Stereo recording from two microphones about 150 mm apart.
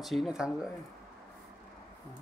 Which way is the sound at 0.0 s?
Centre (ahead or behind).